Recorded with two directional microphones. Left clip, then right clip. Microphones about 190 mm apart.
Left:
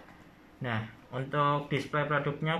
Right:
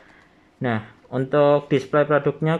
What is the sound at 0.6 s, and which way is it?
Speech, 50° right (ahead or behind).